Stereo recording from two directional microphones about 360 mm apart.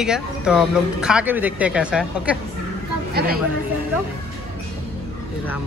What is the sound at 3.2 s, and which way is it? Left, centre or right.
Speech, right.